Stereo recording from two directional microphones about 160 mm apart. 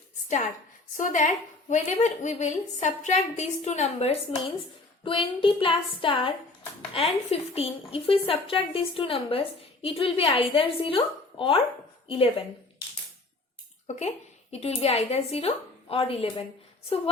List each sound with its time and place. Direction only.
0.9 s a woman's voice: 50° left (ahead or behind)
5.0 s a woman's voice: 30° left (ahead or behind)
13.9 s a woman's voice: 45° left (ahead or behind)